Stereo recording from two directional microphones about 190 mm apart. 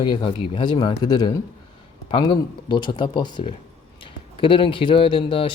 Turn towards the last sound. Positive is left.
turn(degrees=30)  # may be behind; listen again after turning